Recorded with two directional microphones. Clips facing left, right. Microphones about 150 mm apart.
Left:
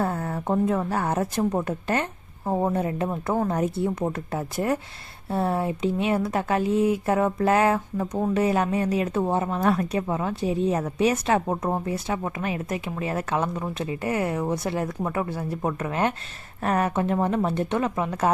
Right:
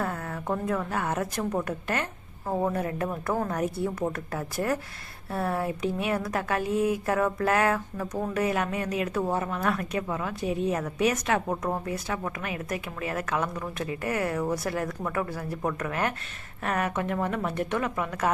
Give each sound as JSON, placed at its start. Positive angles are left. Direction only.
{"t": 0.0, "sound": "speech", "side_deg": 30}